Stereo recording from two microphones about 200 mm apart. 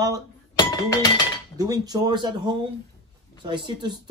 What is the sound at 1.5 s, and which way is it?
Speech, 15° right (ahead or behind).